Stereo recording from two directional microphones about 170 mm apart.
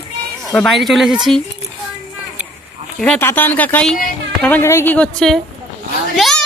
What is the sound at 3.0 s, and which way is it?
Speech, 5° left (ahead or behind).